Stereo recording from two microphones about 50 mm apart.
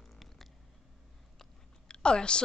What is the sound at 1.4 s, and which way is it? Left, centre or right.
Chewing, centre.